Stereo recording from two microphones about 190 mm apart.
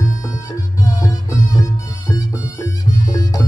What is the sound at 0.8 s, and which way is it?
Music, 15° left (ahead or behind).